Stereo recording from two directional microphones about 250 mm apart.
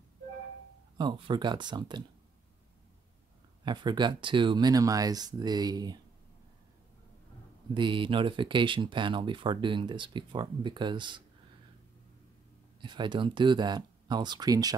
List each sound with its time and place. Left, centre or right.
0.9 s speech: centre
3.6 s speech: centre
7.7 s speech: centre
12.8 s speech: centre